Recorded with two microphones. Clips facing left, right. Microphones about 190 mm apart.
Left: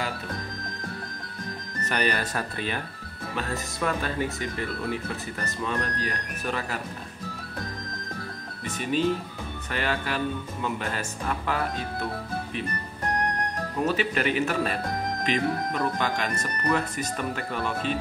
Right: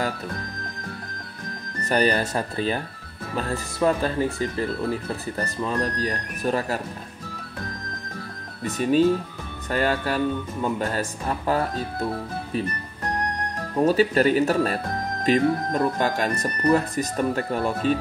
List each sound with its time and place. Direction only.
1.9 s speech: 35° right (ahead or behind)
8.6 s speech: 40° right (ahead or behind)
13.8 s speech: 35° right (ahead or behind)